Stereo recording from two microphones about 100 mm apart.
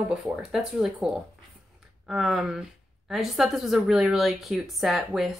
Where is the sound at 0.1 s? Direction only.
10° right (ahead or behind).